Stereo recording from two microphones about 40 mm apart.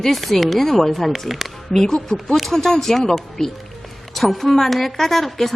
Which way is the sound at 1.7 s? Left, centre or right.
Centre.